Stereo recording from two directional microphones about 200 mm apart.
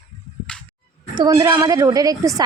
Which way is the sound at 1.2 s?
15° right (ahead or behind).